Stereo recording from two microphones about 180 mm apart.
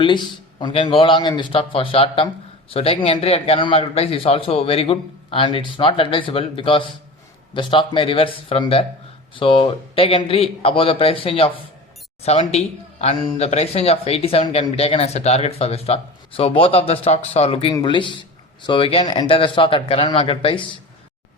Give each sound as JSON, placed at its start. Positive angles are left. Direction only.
{"t": 0.0, "sound": "a man's voice", "side_deg": 25}